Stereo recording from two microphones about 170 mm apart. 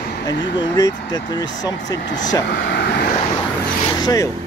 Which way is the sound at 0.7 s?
20° left (ahead or behind).